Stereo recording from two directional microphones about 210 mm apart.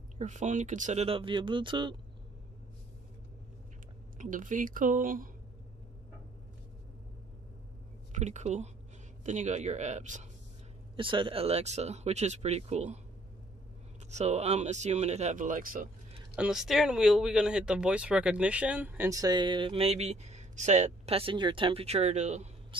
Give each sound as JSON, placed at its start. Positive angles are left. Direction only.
{"t": 0.2, "sound": "speech", "side_deg": -35}
{"t": 4.2, "sound": "speech", "side_deg": -40}
{"t": 8.1, "sound": "speech", "side_deg": -35}
{"t": 11.0, "sound": "speech", "side_deg": -25}
{"t": 14.1, "sound": "speech", "side_deg": -30}
{"t": 16.3, "sound": "speech", "side_deg": 0}